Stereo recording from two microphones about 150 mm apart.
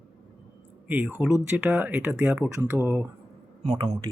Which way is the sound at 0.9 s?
10° right (ahead or behind).